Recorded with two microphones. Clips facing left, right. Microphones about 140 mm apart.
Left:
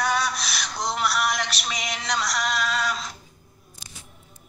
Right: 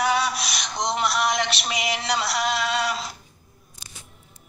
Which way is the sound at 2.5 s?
30° right (ahead or behind).